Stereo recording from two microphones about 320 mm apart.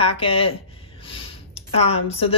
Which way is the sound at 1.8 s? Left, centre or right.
Centre.